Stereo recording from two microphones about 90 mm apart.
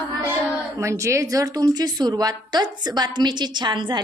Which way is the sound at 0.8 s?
35° right (ahead or behind).